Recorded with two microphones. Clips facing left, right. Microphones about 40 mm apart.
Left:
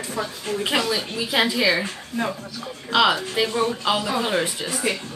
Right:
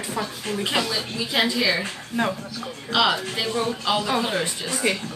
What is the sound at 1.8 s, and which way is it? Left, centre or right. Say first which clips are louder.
Speech: right 2 dB; right.